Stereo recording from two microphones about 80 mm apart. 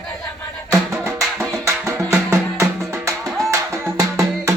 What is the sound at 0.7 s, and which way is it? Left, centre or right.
Music, right.